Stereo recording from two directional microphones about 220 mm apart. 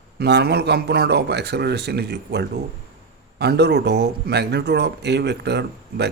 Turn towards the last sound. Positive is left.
turn(degrees=-50)  # may be behind; listen again after turning